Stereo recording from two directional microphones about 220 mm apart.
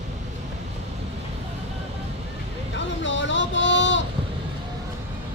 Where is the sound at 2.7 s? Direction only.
55° left (ahead or behind).